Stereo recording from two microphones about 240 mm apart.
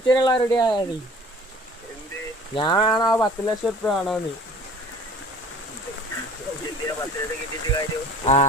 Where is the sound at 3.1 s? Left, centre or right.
Centre.